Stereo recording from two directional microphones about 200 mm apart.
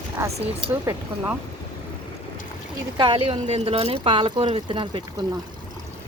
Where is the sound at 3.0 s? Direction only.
25° right (ahead or behind).